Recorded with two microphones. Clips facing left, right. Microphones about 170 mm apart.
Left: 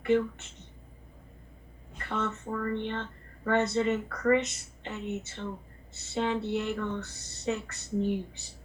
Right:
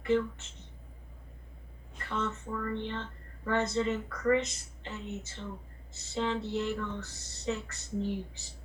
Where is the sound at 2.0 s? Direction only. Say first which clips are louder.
Left 2 dB; 55° left (ahead or behind).